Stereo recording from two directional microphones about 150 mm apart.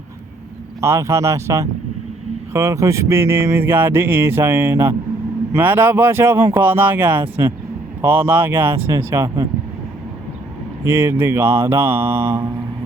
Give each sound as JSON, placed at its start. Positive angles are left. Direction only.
{"t": 0.8, "sound": "speech", "side_deg": -20}
{"t": 10.8, "sound": "speech", "side_deg": -15}